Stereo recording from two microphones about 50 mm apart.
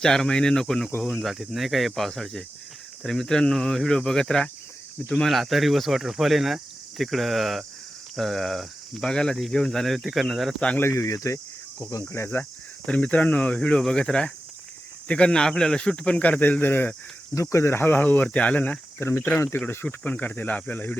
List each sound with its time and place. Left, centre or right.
0.0 s speech: centre
1.1 s speech: centre
5.2 s speech: centre
10.9 s speech: left
12.0 s speech: left
12.8 s speech: left
16.4 s speech: left
17.3 s speech: left
17.7 s speech: left
18.3 s speech: left
18.9 s speech: left
19.5 s speech: left